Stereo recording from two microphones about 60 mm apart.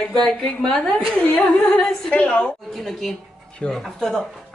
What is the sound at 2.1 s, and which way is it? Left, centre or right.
Speech, centre.